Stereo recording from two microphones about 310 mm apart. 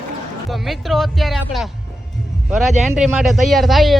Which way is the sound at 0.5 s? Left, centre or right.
Centre.